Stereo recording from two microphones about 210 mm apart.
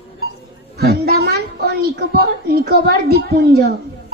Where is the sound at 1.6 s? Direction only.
50° right (ahead or behind).